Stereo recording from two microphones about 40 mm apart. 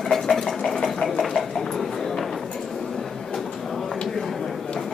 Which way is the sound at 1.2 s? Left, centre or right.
Centre.